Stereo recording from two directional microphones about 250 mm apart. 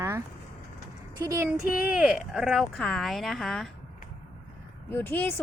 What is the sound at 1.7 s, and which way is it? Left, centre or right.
Speech, centre.